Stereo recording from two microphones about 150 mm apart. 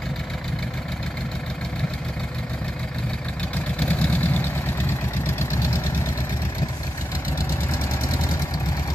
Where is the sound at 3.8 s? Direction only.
10° left (ahead or behind).